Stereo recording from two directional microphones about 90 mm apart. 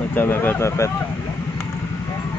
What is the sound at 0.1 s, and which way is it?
Speech, 25° left (ahead or behind).